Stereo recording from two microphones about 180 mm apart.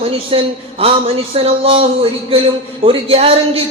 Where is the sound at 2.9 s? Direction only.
30° right (ahead or behind).